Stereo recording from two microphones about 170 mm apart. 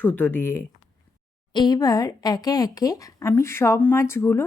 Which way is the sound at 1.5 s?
25° left (ahead or behind).